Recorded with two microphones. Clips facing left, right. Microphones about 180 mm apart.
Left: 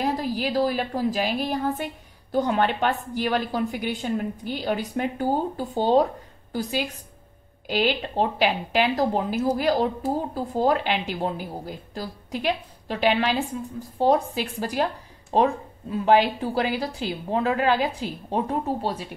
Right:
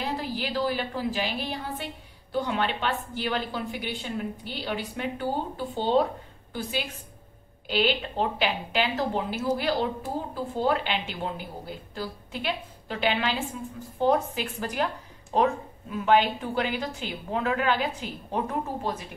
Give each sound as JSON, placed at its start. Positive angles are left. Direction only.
{"t": 0.0, "sound": "a woman's voice", "side_deg": 40}
{"t": 8.7, "sound": "a woman's voice", "side_deg": 40}